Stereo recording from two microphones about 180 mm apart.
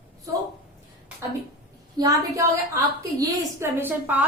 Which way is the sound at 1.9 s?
20° right (ahead or behind).